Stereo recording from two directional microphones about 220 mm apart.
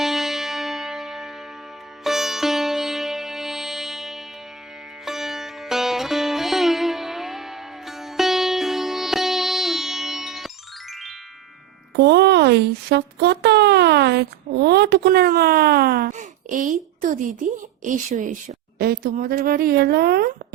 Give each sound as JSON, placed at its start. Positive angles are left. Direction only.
{"t": 0.0, "sound": "music", "side_deg": 0}
{"t": 2.0, "sound": "sitar", "side_deg": 0}
{"t": 5.0, "sound": "music", "side_deg": 0}
{"t": 11.9, "sound": "a woman's voice", "side_deg": -50}